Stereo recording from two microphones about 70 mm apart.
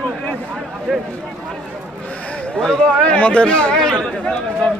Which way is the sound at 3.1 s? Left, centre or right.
Centre.